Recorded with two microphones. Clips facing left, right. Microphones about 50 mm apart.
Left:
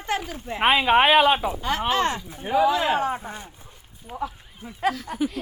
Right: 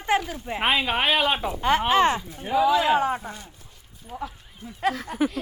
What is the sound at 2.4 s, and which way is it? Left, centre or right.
A woman's voice, centre.